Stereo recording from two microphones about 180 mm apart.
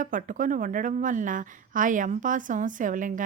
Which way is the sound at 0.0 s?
45° right (ahead or behind).